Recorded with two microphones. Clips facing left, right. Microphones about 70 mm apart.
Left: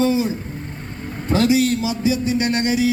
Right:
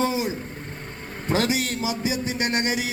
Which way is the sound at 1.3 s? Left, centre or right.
Right.